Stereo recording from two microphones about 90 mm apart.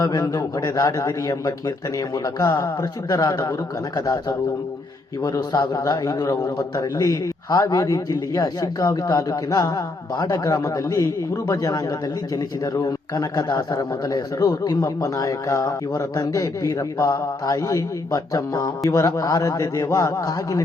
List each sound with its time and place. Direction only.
0.0 s a man's voice: 50° left (ahead or behind)
5.2 s a man's voice: 50° left (ahead or behind)